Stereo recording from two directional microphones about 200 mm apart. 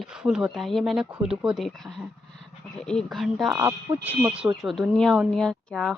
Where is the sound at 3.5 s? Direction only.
10° right (ahead or behind).